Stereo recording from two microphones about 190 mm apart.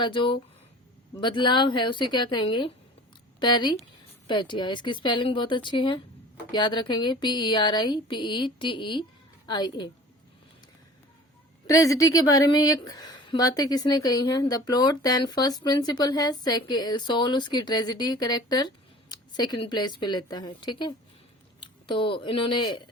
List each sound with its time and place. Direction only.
0.0 s a woman's voice: 25° left (ahead or behind)
11.6 s a woman's voice: 20° left (ahead or behind)